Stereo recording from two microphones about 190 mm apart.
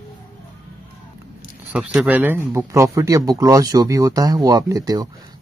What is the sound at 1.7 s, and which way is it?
Speech, 5° right (ahead or behind).